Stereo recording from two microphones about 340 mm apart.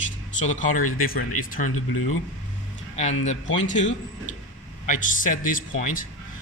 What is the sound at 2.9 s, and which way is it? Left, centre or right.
Speech, centre.